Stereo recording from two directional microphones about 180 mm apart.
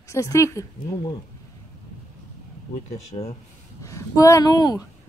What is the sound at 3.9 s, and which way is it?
Speech, 15° left (ahead or behind).